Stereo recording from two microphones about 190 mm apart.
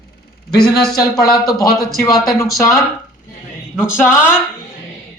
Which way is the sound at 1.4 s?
20° left (ahead or behind).